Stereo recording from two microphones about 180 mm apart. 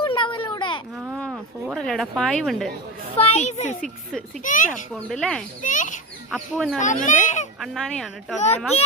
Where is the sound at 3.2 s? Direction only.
35° left (ahead or behind).